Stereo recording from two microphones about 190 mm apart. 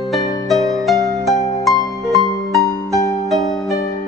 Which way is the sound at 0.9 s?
15° right (ahead or behind).